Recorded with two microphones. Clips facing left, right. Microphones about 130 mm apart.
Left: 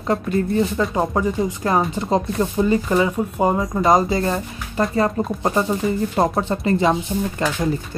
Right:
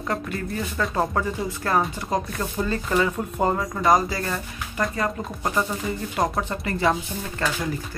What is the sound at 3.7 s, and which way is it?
Speech, 25° left (ahead or behind).